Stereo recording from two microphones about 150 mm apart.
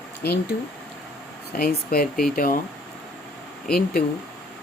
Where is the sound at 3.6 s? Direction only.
75° left (ahead or behind).